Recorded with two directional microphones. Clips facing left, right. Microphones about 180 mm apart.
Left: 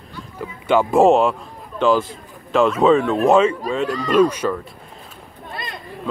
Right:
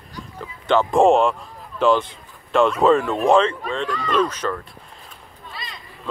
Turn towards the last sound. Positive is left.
turn(degrees=55)  # may be behind; listen again after turning